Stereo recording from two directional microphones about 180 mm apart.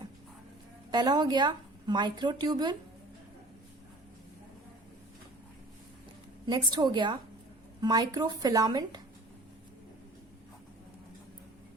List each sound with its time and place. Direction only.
0.9 s a woman's voice: 20° right (ahead or behind)
6.4 s a woman's voice: 25° right (ahead or behind)